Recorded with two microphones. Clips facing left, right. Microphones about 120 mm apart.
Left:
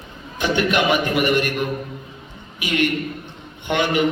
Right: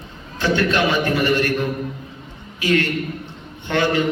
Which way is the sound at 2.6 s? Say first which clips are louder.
Right 2 dB; 15° left (ahead or behind).